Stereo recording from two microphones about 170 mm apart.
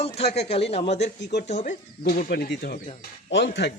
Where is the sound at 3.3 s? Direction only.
85° left.